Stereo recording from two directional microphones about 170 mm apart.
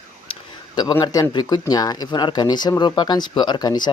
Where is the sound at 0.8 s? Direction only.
25° left (ahead or behind).